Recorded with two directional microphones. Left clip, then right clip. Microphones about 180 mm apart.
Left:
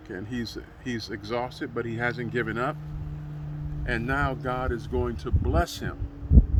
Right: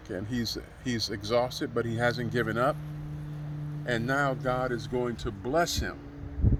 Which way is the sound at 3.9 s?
35° right (ahead or behind).